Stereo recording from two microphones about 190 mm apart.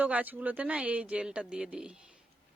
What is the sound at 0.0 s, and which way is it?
Speech, 10° right (ahead or behind).